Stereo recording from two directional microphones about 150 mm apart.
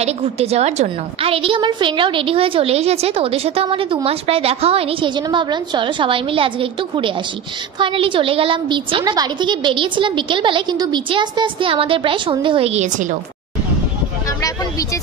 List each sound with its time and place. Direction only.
0.0 s a woman's voice: 45° right (ahead or behind)